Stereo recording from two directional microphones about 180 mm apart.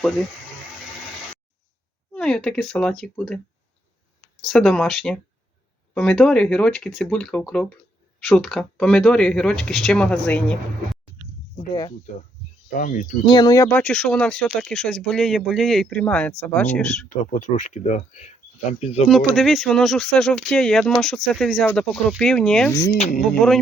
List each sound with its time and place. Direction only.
2.1 s a woman's voice: 5° left (ahead or behind)
11.7 s speech: 25° left (ahead or behind)
12.7 s speech: 45° left (ahead or behind)
13.2 s speech: 25° left (ahead or behind); by 17.1 s 5° left (ahead or behind)
17.3 s speech: 45° left (ahead or behind)
19.3 s speech: centre (ahead or behind)